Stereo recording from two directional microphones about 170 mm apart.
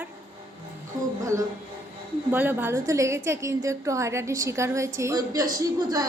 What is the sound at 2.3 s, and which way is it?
A woman's voice, 10° right (ahead or behind).